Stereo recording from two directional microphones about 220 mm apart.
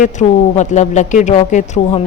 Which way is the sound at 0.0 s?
35° left (ahead or behind).